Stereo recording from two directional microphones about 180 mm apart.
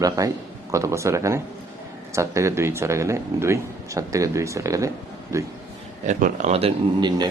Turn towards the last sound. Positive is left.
turn(degrees=-30)  # may be behind; listen again after turning